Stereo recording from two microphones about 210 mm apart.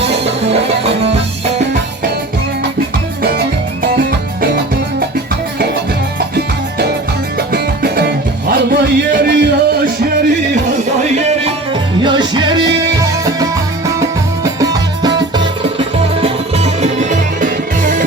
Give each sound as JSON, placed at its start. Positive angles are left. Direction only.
{"t": 0.0, "sound": "music", "side_deg": -55}
{"t": 0.4, "sound": "music", "side_deg": -30}
{"t": 3.8, "sound": "music", "side_deg": -50}
{"t": 6.1, "sound": "music", "side_deg": -50}
{"t": 11.9, "sound": "music", "side_deg": -20}
{"t": 16.2, "sound": "music", "side_deg": -30}